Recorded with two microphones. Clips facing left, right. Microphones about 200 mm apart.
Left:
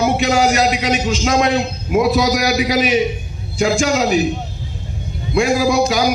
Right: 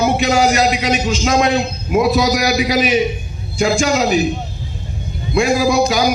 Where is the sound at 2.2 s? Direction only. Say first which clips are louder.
Even; 75° left (ahead or behind).